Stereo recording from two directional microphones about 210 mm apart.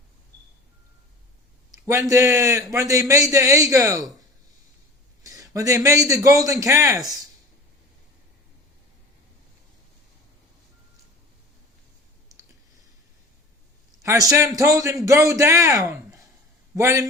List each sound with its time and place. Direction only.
1.8 s a man's voice: 15° right (ahead or behind)
5.2 s a man's voice: 15° right (ahead or behind)
14.0 s a man's voice: 15° right (ahead or behind)